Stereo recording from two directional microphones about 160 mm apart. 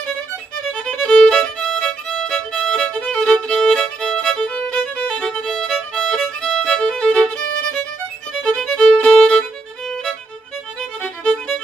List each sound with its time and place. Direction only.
0.8 s violin: 5° left (ahead or behind)
8.3 s music: centre (ahead or behind)